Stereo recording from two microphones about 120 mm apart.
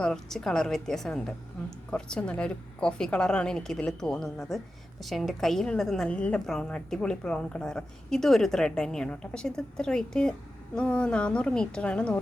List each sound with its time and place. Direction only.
0.0 s a woman's voice: 5° left (ahead or behind)